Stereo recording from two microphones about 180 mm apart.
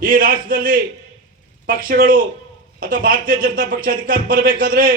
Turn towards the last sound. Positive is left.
turn(degrees=-55)  # may be behind; listen again after turning